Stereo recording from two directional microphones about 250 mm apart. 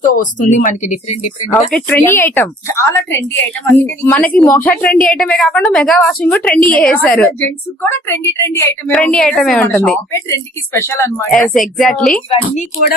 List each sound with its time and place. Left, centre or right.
0.1 s a woman's voice: left
1.7 s a woman's voice: centre